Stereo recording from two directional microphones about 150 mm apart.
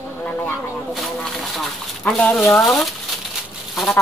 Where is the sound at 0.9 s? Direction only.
Centre (ahead or behind).